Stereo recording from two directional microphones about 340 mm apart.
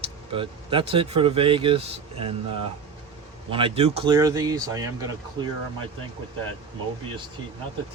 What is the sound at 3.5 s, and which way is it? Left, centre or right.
A man's voice, centre.